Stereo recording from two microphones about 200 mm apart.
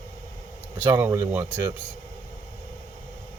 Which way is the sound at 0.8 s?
10° right (ahead or behind).